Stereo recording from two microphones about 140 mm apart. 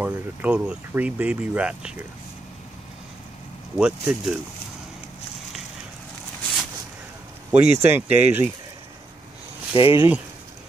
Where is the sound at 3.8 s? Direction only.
5° right (ahead or behind).